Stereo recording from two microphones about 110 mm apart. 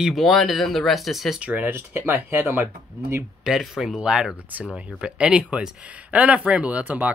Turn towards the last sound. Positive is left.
turn(degrees=-15)  # may be behind; listen again after turning